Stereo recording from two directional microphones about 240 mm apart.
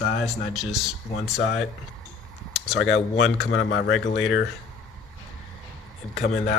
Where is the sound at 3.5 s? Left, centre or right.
Left.